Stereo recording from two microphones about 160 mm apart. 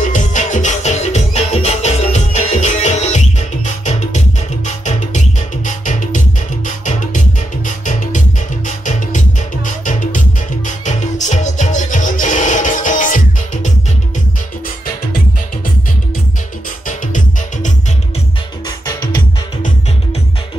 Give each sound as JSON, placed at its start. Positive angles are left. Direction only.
{"t": 0.0, "sound": "music", "side_deg": 50}
{"t": 18.9, "sound": "music", "side_deg": 65}